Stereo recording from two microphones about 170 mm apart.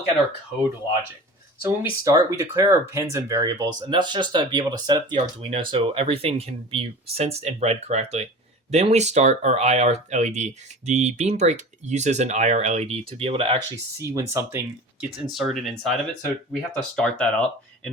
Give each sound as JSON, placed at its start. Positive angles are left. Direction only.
{"t": 1.6, "sound": "speech", "side_deg": -20}
{"t": 14.0, "sound": "speech", "side_deg": -20}
{"t": 15.3, "sound": "speech", "side_deg": 0}